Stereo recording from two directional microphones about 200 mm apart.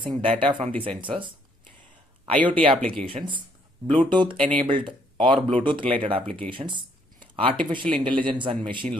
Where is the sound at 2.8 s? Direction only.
5° left (ahead or behind).